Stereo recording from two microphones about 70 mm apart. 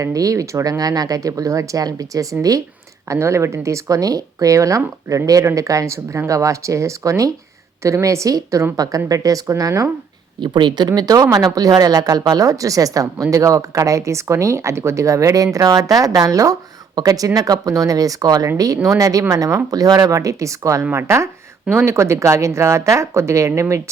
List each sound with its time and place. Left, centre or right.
0.0 s speech: right
3.1 s speech: right
10.4 s speech: right